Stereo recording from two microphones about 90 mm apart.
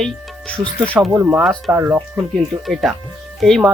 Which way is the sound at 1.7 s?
15° right (ahead or behind).